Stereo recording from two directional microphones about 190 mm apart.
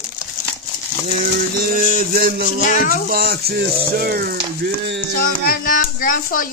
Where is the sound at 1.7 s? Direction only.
45° right (ahead or behind); by 5.0 s 65° right (ahead or behind).